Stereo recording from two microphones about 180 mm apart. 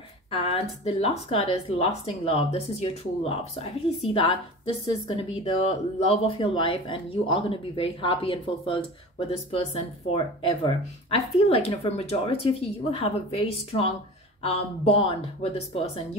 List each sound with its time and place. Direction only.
0.3 s speech: 35° left (ahead or behind)